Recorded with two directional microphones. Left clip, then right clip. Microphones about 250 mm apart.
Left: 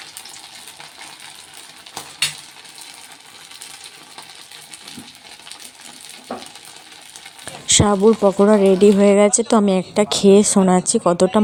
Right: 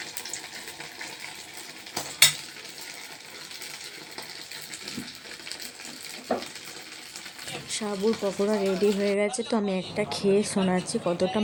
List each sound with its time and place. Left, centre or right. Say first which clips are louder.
7.7 s speech: left 14 dB; left